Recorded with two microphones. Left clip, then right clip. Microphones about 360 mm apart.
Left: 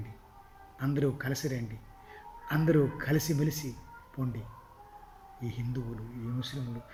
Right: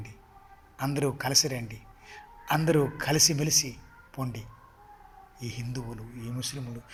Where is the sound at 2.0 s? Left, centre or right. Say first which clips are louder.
Right 8 dB; centre.